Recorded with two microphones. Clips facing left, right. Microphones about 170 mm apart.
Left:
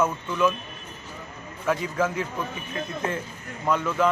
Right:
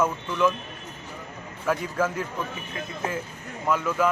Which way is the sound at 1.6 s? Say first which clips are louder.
Left 1 dB; centre (ahead or behind).